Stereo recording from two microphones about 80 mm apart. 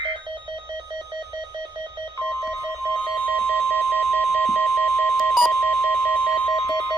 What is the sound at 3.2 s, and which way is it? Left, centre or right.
Alarm clock, left.